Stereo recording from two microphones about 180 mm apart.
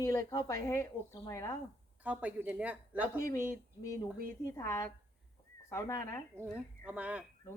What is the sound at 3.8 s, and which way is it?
Speech, 15° left (ahead or behind).